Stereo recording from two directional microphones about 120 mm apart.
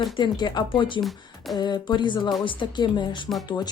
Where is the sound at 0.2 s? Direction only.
40° left (ahead or behind).